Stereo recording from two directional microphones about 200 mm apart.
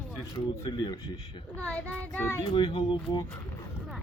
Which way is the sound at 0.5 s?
20° left (ahead or behind).